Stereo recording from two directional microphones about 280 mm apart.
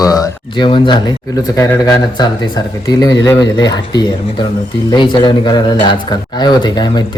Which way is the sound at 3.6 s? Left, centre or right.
Centre.